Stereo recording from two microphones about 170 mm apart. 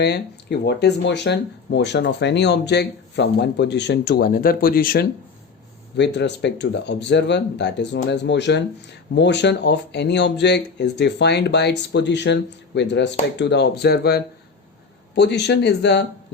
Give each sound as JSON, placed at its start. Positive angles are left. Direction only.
{"t": 0.6, "sound": "speech", "side_deg": 80}
{"t": 6.0, "sound": "speech", "side_deg": 90}
{"t": 15.1, "sound": "speech", "side_deg": 85}